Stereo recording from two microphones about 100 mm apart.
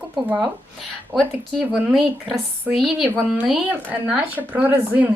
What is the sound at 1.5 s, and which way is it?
Speech, 5° right (ahead or behind).